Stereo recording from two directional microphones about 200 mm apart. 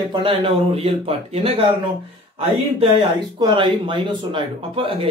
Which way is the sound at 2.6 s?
30° right (ahead or behind).